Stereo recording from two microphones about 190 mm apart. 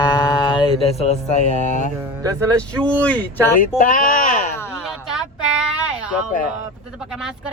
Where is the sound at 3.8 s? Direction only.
45° left (ahead or behind).